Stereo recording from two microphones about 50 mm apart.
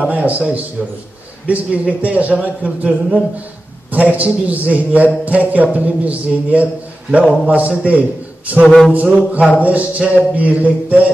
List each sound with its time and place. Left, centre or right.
0.1 s a man's voice: right
1.5 s a man's voice: right
8.6 s speech: centre
8.9 s a man's voice: right